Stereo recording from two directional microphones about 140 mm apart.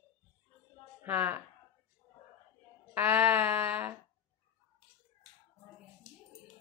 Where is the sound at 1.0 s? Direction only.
15° right (ahead or behind).